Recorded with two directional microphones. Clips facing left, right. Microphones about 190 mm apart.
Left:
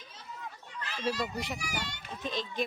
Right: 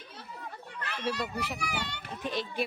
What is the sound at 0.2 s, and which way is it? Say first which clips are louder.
Children playing: right 1 dB; 60° right (ahead or behind).